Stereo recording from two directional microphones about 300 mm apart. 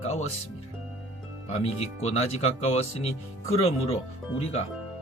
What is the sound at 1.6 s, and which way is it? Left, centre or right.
Speech, left.